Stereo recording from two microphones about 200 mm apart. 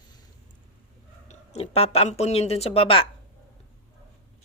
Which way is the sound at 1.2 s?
30° left (ahead or behind).